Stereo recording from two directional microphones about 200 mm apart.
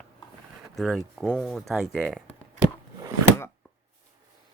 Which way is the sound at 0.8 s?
Centre (ahead or behind).